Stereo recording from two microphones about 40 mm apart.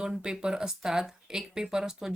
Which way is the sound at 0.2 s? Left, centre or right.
Centre.